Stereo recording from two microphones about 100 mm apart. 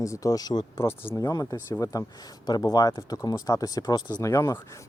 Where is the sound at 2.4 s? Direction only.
45° left (ahead or behind).